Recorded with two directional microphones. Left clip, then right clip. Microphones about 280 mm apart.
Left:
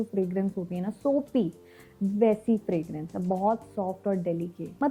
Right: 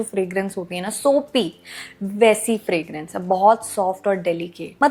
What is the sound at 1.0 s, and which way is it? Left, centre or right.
Speech, right.